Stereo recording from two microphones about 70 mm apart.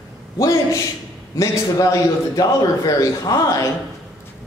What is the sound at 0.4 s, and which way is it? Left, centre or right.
A man's voice, left.